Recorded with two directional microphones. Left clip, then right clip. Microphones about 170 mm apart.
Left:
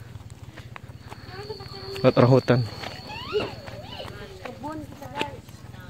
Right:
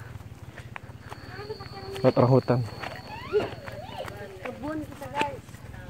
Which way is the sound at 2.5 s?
20° left (ahead or behind).